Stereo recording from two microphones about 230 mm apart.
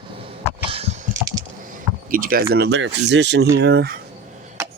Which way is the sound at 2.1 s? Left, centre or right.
Right.